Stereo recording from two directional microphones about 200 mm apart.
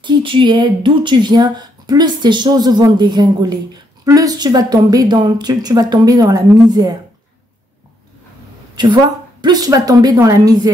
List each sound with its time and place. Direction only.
0.0 s speech: 25° right (ahead or behind)
8.7 s speech: 20° right (ahead or behind)